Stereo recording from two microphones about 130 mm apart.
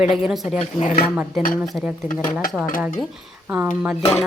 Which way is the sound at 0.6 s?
65° left (ahead or behind).